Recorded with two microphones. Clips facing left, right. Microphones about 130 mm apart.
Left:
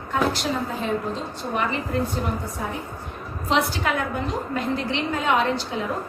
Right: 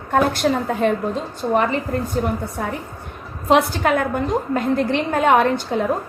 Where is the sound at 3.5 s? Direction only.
50° right (ahead or behind).